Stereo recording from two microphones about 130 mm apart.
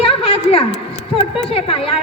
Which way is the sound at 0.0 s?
45° left (ahead or behind).